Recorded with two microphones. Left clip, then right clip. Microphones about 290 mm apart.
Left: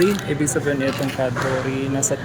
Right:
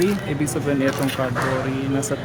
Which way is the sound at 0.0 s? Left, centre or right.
Centre.